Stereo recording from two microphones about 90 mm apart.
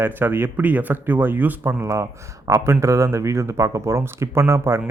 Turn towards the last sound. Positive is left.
turn(degrees=-25)  # may be behind; listen again after turning